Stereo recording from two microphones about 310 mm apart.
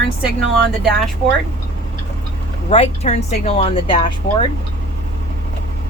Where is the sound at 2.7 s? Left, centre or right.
Left.